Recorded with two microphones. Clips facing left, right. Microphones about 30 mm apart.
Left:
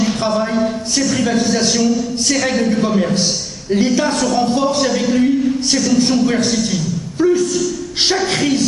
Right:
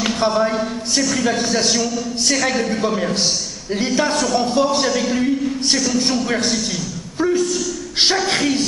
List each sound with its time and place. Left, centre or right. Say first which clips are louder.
0.2 s a sound: left 1 dB; centre
1.5 s a man's voice: left 4 dB; centre
7.2 s a woman's voice: left 4 dB; centre